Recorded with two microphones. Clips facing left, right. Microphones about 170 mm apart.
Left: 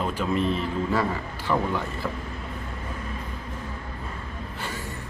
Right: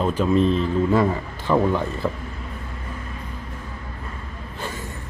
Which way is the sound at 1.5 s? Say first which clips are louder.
Right 6 dB; 25° right (ahead or behind).